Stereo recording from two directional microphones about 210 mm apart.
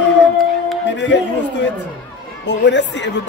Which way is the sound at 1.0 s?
55° left (ahead or behind).